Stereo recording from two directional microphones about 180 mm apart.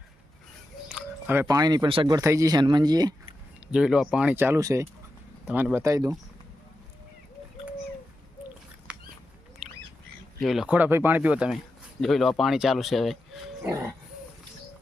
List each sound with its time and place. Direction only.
0.9 s speech: 10° right (ahead or behind); by 3.3 s 25° right (ahead or behind)
3.7 s speech: 5° right (ahead or behind)
8.9 s a sound: 5° right (ahead or behind)
10.4 s speech: centre (ahead or behind)